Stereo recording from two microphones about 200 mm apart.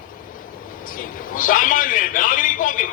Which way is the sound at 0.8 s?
45° left (ahead or behind).